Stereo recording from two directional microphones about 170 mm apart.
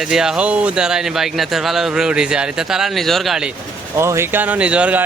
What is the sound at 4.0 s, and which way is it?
Speech, 15° right (ahead or behind).